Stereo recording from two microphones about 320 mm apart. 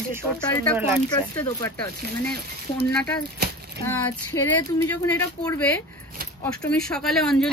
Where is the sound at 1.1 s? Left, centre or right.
Centre.